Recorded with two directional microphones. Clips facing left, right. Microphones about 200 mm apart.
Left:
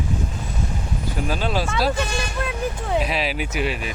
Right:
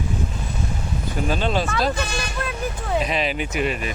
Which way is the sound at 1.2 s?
5° left (ahead or behind).